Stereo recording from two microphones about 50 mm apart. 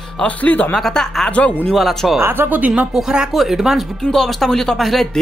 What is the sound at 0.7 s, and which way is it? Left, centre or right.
Speech, centre.